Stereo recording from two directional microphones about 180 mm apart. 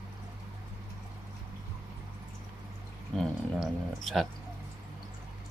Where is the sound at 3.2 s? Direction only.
Centre (ahead or behind).